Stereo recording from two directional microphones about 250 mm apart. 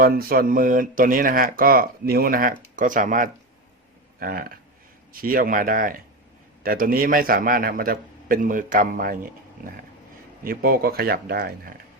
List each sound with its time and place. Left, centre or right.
0.0 s speech: right